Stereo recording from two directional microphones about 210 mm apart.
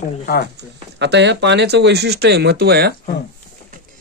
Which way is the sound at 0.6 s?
55° right (ahead or behind).